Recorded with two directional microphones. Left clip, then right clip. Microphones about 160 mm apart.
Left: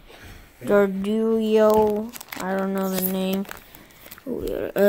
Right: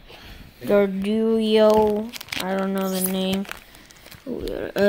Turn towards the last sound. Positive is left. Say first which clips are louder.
# left 1 dB
turn(degrees=0)  # may be behind; listen again after turning